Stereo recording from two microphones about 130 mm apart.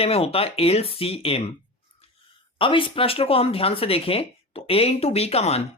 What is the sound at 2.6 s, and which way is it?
Speech, 40° left (ahead or behind).